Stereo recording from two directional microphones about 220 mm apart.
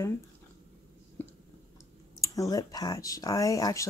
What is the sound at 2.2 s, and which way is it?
Speech, 15° left (ahead or behind).